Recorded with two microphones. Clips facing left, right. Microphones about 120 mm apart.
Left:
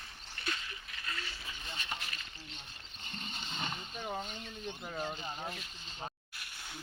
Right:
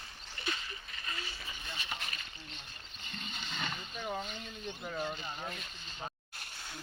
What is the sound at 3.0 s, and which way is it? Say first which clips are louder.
Vehicle: even; 30° left (ahead or behind).